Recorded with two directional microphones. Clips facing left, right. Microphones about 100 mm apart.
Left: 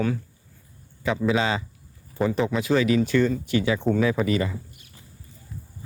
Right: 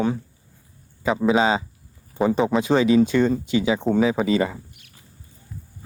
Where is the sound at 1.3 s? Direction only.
25° right (ahead or behind).